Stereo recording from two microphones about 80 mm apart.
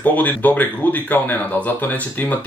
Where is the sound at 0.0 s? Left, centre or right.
Left.